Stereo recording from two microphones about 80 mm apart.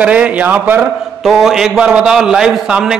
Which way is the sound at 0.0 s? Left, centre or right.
Centre.